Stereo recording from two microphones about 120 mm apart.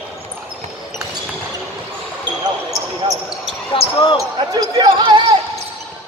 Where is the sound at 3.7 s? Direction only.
50° left (ahead or behind).